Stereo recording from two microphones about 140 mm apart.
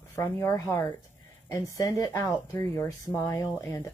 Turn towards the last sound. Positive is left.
turn(degrees=20)  # may be behind; listen again after turning